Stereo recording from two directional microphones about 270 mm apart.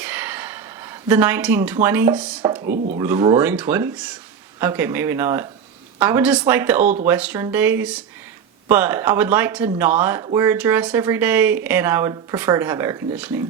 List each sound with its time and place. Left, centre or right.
0.0 s a sound: centre
2.7 s speech: right
3.0 s speech: centre